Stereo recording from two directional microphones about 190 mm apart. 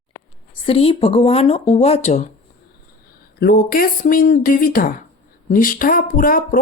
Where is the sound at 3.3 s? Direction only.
55° left (ahead or behind).